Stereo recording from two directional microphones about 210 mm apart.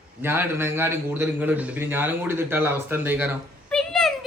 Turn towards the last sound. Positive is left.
turn(degrees=5)  # may be behind; listen again after turning